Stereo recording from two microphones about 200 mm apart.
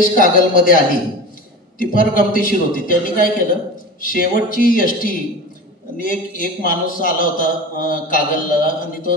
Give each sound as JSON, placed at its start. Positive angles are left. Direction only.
{"t": 0.1, "sound": "a man's voice", "side_deg": 45}
{"t": 1.8, "sound": "a man's voice", "side_deg": 45}